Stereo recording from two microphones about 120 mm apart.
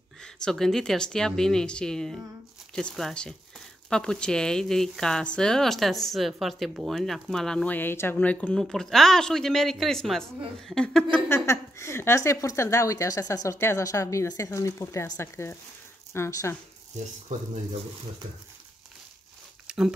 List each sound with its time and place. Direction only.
0.2 s speech: 5° left (ahead or behind)
11.2 s speech: 20° left (ahead or behind)
19.7 s a sound: 5° right (ahead or behind)